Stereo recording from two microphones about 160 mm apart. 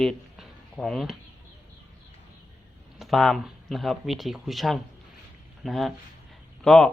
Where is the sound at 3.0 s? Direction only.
Centre (ahead or behind).